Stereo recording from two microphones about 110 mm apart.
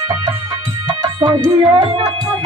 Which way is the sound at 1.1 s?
45° right (ahead or behind).